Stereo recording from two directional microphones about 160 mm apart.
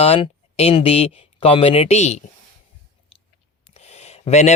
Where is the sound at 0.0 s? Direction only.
40° left (ahead or behind).